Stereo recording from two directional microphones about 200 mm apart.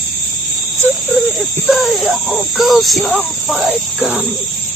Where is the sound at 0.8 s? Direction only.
10° right (ahead or behind).